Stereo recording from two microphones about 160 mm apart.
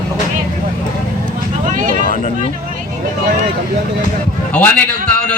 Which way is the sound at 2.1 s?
50° left (ahead or behind).